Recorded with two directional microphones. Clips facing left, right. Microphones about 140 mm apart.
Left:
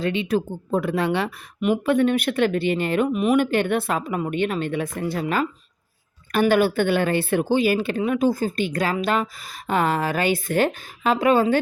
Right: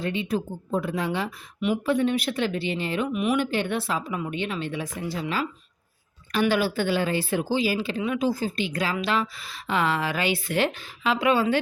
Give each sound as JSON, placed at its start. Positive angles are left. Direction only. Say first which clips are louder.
{"t": 0.0, "sound": "speech", "louder": "left 5 dB", "side_deg": 85}
{"t": 3.1, "sound": "speech", "louder": "left 3 dB", "side_deg": 40}